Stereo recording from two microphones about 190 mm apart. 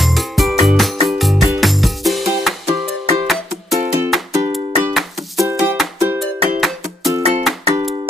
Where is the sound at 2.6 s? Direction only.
30° right (ahead or behind).